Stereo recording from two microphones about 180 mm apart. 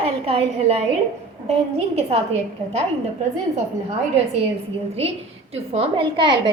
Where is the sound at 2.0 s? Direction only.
35° right (ahead or behind).